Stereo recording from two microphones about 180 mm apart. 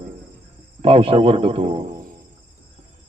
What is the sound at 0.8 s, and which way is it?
A man's voice, 30° right (ahead or behind).